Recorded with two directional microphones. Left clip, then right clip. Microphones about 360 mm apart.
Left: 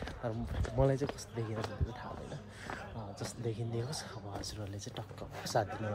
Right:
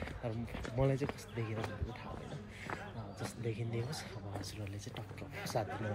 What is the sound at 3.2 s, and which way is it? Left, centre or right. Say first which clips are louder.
Speech: left 1 dB; centre.